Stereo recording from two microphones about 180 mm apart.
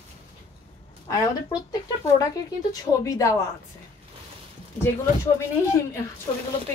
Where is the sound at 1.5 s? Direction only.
20° left (ahead or behind).